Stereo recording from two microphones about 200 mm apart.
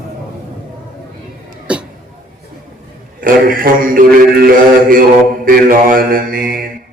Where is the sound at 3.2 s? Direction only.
45° right (ahead or behind).